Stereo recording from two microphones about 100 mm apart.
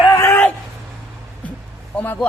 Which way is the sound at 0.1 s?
25° left (ahead or behind).